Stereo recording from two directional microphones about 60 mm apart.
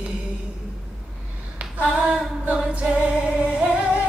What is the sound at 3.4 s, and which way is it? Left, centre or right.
Singing, centre.